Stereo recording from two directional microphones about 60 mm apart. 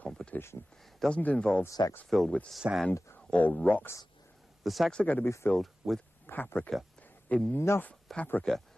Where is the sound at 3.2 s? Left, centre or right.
Left.